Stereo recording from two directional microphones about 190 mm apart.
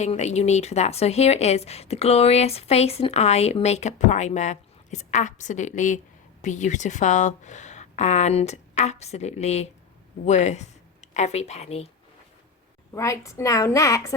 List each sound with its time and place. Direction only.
0.0 s a woman's voice: 35° left (ahead or behind)
12.9 s a woman's voice: 15° left (ahead or behind)